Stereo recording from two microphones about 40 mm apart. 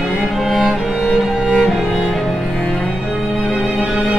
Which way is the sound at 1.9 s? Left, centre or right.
Centre.